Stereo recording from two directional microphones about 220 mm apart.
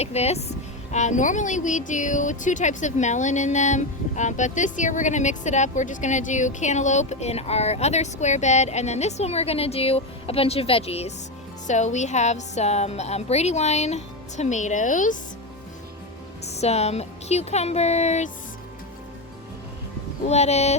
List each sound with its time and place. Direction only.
0.0 s speech: 30° left (ahead or behind)
16.5 s speech: 30° left (ahead or behind)
20.2 s speech: 30° left (ahead or behind)